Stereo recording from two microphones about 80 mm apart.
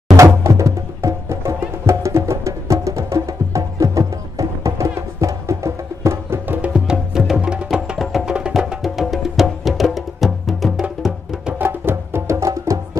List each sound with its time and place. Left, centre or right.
0.2 s music: right
6.4 s music: right
6.9 s music: centre
8.3 s music: centre
11.5 s music: right